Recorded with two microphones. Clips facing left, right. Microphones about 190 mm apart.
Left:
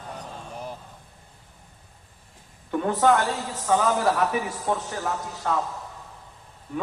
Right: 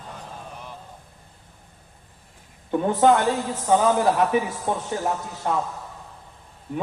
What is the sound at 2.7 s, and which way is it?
A man's voice, 20° right (ahead or behind).